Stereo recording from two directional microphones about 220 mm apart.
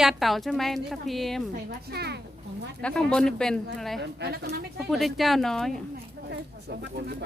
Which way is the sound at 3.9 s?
50° right (ahead or behind).